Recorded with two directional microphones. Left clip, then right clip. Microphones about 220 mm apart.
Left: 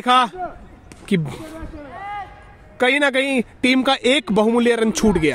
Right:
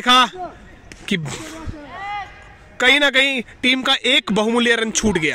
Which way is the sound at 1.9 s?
50° left (ahead or behind).